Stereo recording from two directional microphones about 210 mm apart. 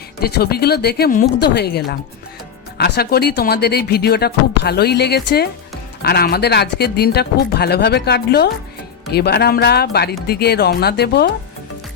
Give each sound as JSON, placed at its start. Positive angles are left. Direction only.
{"t": 0.2, "sound": "speech", "side_deg": 50}